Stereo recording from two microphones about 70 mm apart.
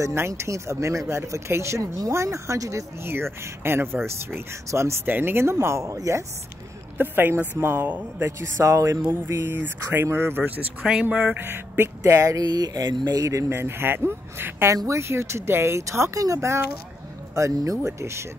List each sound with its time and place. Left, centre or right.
0.0 s speech: right
3.6 s speech: right
5.0 s speech: right
7.0 s speech: right
7.7 s speech: right
8.3 s speech: right
9.1 s speech: right
10.8 s speech: centre
11.1 s speech: centre
11.3 s speech: right
12.4 s a sound: right
13.2 s speech: right